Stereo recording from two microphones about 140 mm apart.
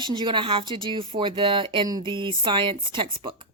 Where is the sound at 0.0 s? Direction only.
35° right (ahead or behind).